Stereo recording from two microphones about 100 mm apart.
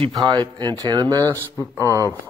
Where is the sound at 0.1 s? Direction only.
50° right (ahead or behind).